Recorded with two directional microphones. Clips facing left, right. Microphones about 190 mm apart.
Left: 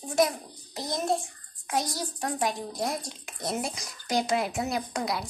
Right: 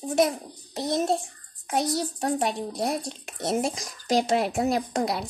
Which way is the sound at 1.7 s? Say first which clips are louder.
Right 4 dB; 60° right (ahead or behind).